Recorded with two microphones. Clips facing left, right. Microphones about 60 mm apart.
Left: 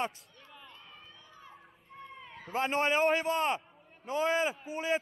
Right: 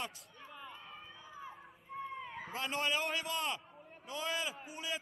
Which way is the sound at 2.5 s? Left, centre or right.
Left.